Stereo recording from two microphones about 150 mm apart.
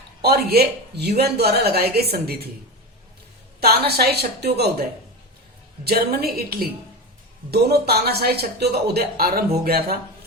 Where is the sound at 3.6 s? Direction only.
90° right.